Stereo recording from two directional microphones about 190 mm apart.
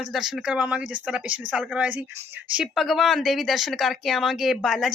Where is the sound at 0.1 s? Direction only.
Centre (ahead or behind).